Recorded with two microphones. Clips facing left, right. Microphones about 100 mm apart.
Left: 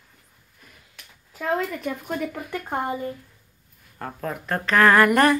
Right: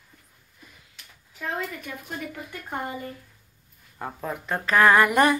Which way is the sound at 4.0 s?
10° right (ahead or behind).